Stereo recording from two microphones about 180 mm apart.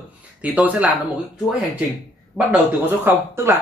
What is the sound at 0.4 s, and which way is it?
Speech, 10° right (ahead or behind).